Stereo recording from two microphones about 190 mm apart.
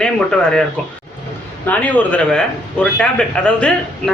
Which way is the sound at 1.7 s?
10° left (ahead or behind).